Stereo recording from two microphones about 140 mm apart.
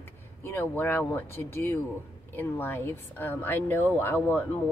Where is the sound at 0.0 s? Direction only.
20° left (ahead or behind).